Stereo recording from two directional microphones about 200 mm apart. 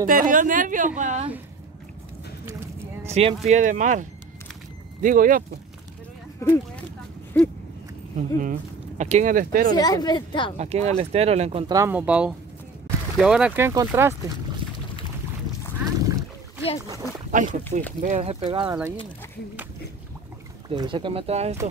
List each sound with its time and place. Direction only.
0.0 s speech: 45° right (ahead or behind)
3.1 s speech: 30° right (ahead or behind)
6.4 s speech: 15° left (ahead or behind)
8.4 s speech: 40° right (ahead or behind)
9.8 s a woman's voice: 20° left (ahead or behind)
10.6 s speech: 30° right (ahead or behind)
11.7 s speech: 10° right (ahead or behind)
15.8 s a sound: 15° right (ahead or behind)
17.3 s speech: 40° right (ahead or behind)
18.7 s speech: 10° right (ahead or behind)
20.7 s speech: 25° right (ahead or behind)